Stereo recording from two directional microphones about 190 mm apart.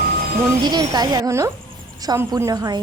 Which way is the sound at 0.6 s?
20° right (ahead or behind).